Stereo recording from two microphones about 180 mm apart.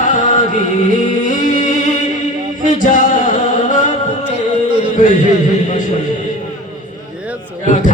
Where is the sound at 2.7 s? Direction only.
45° left (ahead or behind).